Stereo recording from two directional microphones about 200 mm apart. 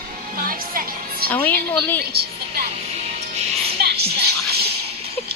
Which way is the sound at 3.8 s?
55° right (ahead or behind).